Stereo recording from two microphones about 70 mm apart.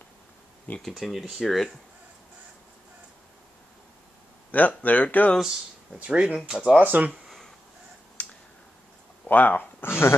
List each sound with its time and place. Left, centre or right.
0.8 s speech: centre
4.5 s speech: left
5.9 s speech: centre
6.8 s speech: right
8.2 s a sound: left
9.3 s speech: left